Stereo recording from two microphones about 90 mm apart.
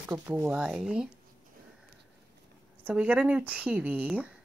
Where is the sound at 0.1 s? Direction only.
25° right (ahead or behind).